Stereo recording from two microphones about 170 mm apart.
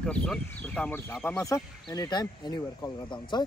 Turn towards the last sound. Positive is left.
turn(degrees=25)  # may be behind; listen again after turning